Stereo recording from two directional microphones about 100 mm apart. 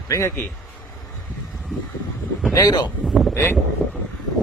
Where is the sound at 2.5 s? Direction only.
45° left (ahead or behind).